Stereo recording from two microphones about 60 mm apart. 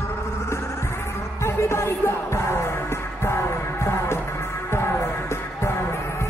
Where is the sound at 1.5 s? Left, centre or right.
Left.